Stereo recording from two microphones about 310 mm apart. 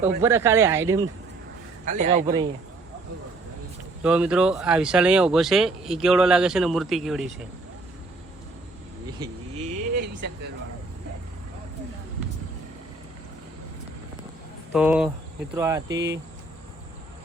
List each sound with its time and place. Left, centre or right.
0.2 s speech: centre
1.8 s a man's voice: right
2.2 s speech: centre
4.0 s speech: centre
9.1 s speech: centre
14.7 s speech: centre
16.0 s speech: right